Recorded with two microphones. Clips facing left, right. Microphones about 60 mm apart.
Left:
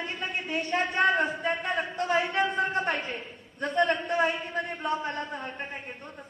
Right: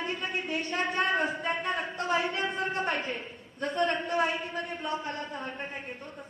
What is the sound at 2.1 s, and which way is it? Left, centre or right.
Speech, left.